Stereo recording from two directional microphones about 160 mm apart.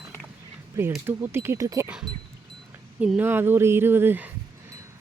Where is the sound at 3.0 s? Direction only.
10° right (ahead or behind).